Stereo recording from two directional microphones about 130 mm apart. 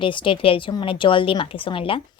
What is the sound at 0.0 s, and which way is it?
A woman's voice, 40° left (ahead or behind).